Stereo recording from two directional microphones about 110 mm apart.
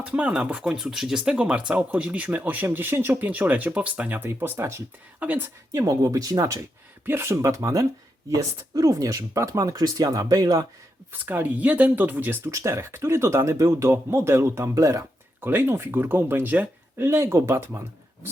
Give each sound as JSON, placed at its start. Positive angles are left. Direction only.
{"t": 0.0, "sound": "speech", "side_deg": -10}
{"t": 5.7, "sound": "speech", "side_deg": -30}
{"t": 11.1, "sound": "speech", "side_deg": -15}